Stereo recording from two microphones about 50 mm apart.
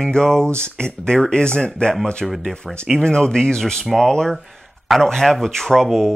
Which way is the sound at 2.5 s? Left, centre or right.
Centre.